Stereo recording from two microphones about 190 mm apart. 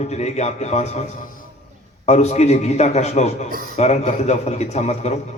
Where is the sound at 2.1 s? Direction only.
35° left (ahead or behind).